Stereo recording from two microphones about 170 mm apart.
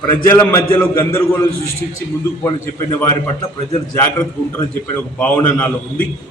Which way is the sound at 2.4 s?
15° left (ahead or behind).